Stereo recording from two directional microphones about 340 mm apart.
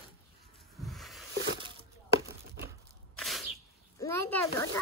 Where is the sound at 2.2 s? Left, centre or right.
Right.